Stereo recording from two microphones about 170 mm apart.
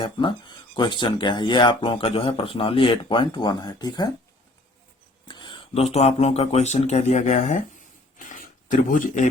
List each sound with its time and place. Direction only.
0.0 s speech: 30° left (ahead or behind)
5.3 s speech: 30° left (ahead or behind); by 9.3 s 50° left (ahead or behind)